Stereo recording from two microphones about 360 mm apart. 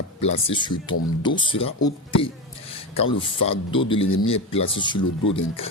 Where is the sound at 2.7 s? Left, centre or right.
Centre.